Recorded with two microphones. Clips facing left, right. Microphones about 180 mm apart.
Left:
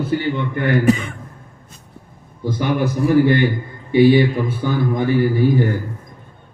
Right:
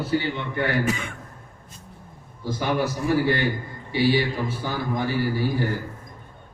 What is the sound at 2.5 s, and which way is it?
A man's voice, 55° left (ahead or behind).